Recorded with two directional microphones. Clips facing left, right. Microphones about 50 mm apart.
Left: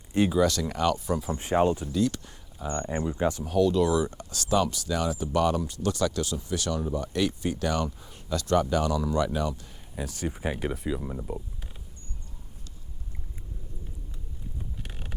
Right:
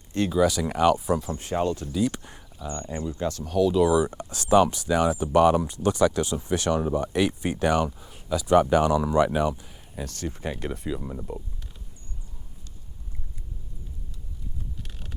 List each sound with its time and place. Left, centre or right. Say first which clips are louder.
0.1 s speech: left 2 dB; centre
0.3 s speech: right 2 dB; centre
1.3 s speech: left 2 dB; left
2.0 s speech: right 1 dB; right
2.6 s speech: left 2 dB; left
3.1 s speech: left 2 dB; centre
3.4 s speech: right 3 dB; centre
4.0 s speech: right 3 dB; centre
7.9 s speech: right 3 dB; centre
8.5 s speech: right 6 dB; right
9.6 s speech: even; centre
14.8 s a sound: left 2 dB; left